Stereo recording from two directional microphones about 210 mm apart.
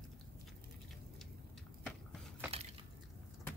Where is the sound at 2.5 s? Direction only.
30° right (ahead or behind).